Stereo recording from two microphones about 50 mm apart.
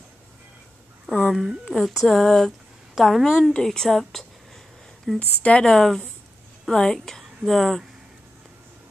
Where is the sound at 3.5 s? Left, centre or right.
Centre.